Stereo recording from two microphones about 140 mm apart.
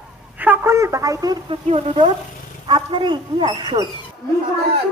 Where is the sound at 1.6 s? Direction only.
50° right (ahead or behind).